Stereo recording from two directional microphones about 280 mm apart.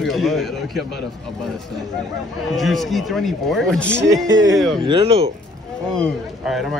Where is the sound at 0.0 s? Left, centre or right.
Centre.